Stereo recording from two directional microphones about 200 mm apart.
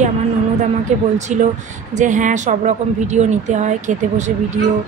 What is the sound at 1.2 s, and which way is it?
Speech, 35° right (ahead or behind).